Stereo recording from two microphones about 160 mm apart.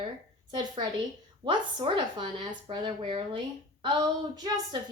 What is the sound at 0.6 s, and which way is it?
Speech, 25° right (ahead or behind).